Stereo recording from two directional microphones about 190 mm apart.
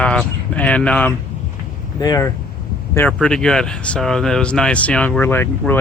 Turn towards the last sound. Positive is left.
turn(degrees=10)  # may be behind; listen again after turning